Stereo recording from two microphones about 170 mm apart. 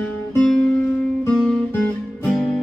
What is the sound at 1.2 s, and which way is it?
Music, 10° left (ahead or behind).